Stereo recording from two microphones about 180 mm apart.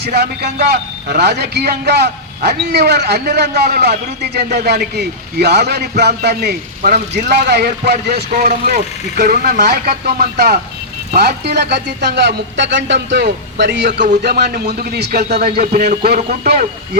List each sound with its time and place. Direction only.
0.1 s a man's voice: 65° right (ahead or behind)
7.3 s speech: 70° right (ahead or behind)
8.3 s speech: 40° right (ahead or behind)
8.6 s a man's voice: 55° right (ahead or behind); by 13.9 s 75° right (ahead or behind)
14.0 s a man's voice: 55° right (ahead or behind)
15.2 s speech: 40° right (ahead or behind)
15.4 s a man's voice: 55° right (ahead or behind)